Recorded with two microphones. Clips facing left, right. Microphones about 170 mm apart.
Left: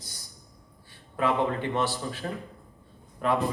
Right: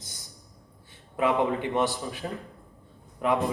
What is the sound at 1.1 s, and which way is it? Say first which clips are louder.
Speech: right 1 dB; 20° right (ahead or behind).